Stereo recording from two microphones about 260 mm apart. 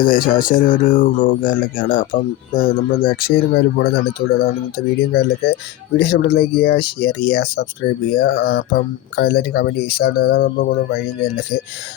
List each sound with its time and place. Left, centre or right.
0.0 s speech: left